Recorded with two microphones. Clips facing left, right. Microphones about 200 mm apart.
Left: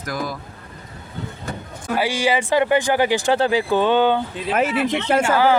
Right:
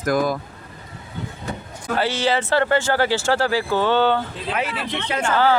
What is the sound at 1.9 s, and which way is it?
A man's voice, 10° left (ahead or behind).